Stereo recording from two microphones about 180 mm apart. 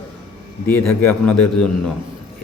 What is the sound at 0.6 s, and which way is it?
A man's voice, 10° left (ahead or behind).